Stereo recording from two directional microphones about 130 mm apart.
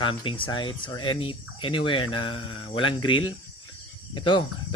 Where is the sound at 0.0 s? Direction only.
40° left (ahead or behind).